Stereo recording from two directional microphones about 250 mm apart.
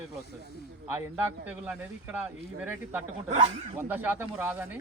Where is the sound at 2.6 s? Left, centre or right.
Centre.